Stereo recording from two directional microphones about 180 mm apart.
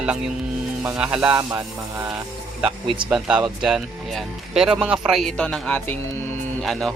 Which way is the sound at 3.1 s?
Centre (ahead or behind).